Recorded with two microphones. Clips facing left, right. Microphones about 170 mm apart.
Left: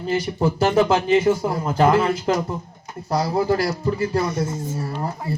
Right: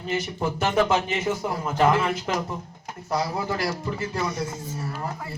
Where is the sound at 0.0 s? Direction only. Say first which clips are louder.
Left 6 dB; 35° left (ahead or behind).